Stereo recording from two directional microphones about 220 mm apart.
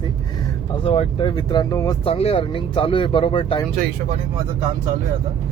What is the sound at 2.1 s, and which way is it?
Speech, 25° left (ahead or behind).